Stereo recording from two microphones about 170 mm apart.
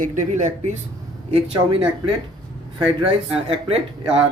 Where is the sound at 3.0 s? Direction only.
35° right (ahead or behind).